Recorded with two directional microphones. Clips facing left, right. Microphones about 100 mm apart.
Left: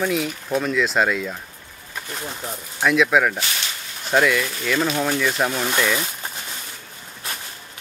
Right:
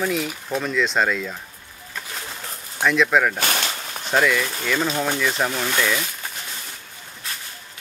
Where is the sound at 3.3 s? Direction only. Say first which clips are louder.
Right 4 dB; 50° right (ahead or behind).